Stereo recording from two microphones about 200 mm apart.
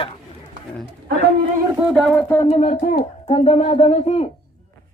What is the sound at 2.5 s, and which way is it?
Speech, 35° left (ahead or behind).